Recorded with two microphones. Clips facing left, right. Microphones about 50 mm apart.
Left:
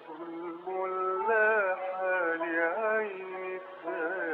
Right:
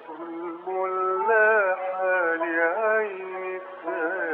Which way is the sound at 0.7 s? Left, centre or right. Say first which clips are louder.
Right 6 dB; right.